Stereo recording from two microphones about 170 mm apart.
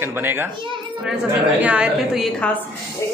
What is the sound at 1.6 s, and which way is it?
Speech, 5° right (ahead or behind).